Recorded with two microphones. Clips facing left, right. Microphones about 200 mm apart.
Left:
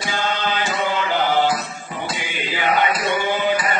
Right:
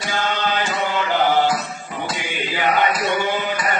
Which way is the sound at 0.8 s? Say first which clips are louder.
Right 2 dB; 45° right (ahead or behind).